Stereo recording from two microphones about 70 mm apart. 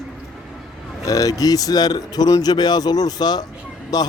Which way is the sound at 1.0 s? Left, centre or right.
Left.